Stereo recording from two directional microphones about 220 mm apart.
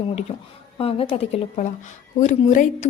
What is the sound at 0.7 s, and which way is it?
A woman's voice, 25° left (ahead or behind).